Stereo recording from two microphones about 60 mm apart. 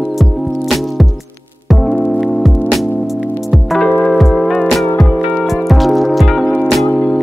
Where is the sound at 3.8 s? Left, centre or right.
Centre.